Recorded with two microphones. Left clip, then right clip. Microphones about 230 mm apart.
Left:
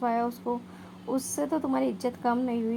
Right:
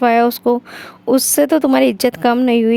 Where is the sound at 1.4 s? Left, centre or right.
Right.